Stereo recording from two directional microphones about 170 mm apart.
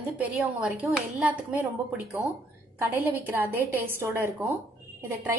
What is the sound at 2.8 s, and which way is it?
A woman's voice, 10° right (ahead or behind).